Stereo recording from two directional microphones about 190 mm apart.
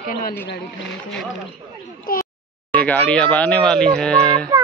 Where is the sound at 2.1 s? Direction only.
50° left (ahead or behind).